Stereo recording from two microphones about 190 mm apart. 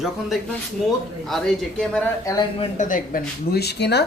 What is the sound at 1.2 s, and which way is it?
Speech, centre (ahead or behind).